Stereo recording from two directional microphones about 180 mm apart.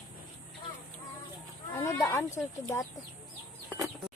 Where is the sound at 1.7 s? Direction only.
15° left (ahead or behind).